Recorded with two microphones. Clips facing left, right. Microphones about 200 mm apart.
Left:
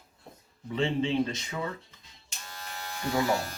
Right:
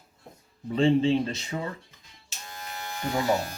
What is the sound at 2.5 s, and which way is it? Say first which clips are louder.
Electric shaver: right 3 dB; 20° right (ahead or behind).